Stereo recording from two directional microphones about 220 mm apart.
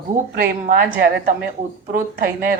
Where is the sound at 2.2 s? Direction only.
40° right (ahead or behind).